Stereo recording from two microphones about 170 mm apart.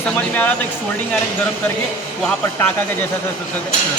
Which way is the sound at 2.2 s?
5° left (ahead or behind).